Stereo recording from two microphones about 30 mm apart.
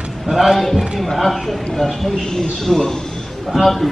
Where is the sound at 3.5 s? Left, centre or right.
Centre.